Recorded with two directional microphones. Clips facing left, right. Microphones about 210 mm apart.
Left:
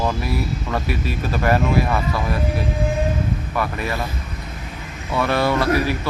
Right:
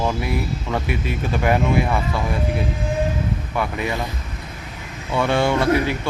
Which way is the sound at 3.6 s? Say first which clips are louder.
Right 1 dB; 20° right (ahead or behind).